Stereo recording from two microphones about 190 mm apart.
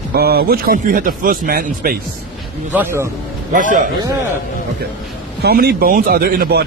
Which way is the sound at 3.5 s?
45° right (ahead or behind).